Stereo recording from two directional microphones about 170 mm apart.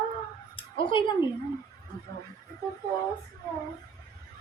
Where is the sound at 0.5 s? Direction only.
30° left (ahead or behind).